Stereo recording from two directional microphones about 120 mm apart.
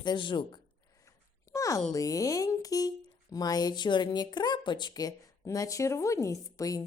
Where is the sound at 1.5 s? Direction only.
30° left (ahead or behind).